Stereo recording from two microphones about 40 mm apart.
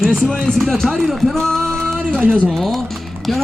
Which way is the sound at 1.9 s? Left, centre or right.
Centre.